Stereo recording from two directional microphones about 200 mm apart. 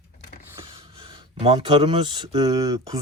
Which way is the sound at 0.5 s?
25° right (ahead or behind).